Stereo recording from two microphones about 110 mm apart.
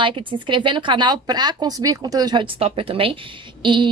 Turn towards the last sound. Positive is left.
turn(degrees=-45)  # may be behind; listen again after turning